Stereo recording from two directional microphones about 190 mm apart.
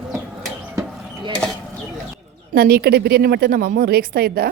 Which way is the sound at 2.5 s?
55° right (ahead or behind).